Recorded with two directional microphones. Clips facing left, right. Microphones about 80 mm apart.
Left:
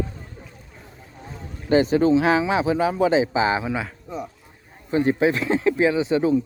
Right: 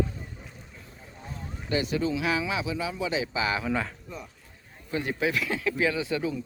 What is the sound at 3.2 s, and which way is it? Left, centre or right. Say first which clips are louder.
Speech: left 8 dB; left.